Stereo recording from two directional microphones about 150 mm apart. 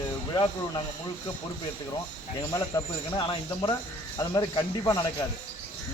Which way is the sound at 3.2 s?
35° left (ahead or behind).